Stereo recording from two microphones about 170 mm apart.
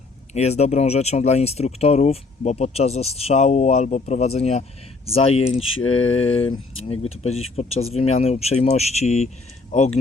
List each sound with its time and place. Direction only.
0.3 s speech: 40° left (ahead or behind)